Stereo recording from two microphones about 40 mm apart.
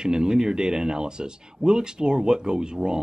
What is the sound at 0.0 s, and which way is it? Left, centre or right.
Speech, centre.